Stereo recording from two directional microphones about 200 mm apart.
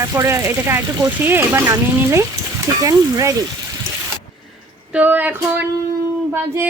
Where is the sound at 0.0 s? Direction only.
15° right (ahead or behind).